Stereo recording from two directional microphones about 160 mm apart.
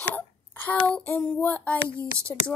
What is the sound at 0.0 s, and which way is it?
Hiccup, 10° left (ahead or behind).